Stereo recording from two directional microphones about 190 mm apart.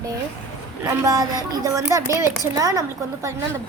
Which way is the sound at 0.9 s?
15° right (ahead or behind).